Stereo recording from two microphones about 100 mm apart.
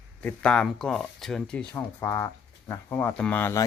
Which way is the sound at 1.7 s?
30° left (ahead or behind).